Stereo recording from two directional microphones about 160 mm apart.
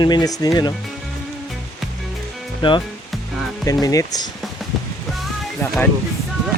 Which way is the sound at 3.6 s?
20° left (ahead or behind).